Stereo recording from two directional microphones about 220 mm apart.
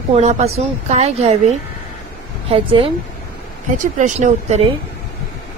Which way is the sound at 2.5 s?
25° right (ahead or behind).